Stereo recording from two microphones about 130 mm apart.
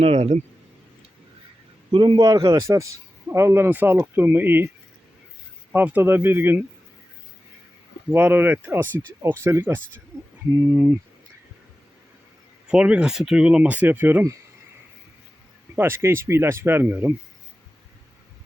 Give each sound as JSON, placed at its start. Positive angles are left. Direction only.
{"t": 0.0, "sound": "speech", "side_deg": -55}
{"t": 1.9, "sound": "speech", "side_deg": -35}
{"t": 5.7, "sound": "speech", "side_deg": -15}
{"t": 8.1, "sound": "speech", "side_deg": -15}
{"t": 12.6, "sound": "speech", "side_deg": -5}
{"t": 15.7, "sound": "speech", "side_deg": -20}